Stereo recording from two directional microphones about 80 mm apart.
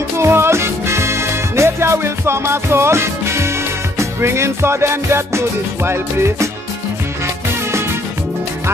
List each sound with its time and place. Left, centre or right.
0.2 s music: right